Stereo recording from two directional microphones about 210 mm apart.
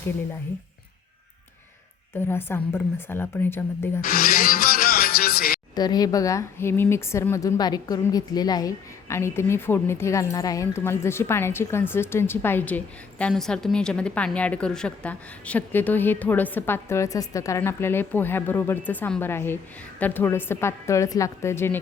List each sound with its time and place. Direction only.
2.2 s speech: 10° left (ahead or behind)
4.0 s speech: 45° left (ahead or behind)
5.7 s speech: 20° left (ahead or behind)